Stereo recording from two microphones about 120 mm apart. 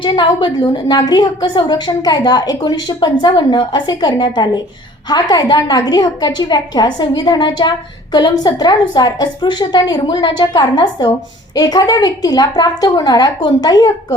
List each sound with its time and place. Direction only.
0.0 s a woman's voice: 40° left (ahead or behind)